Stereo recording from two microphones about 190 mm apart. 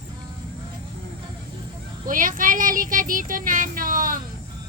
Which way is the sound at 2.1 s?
45° right (ahead or behind).